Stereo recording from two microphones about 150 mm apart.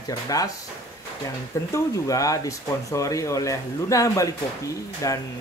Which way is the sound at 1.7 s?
20° left (ahead or behind).